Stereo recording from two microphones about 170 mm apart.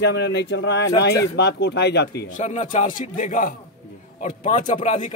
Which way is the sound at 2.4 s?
45° left (ahead or behind).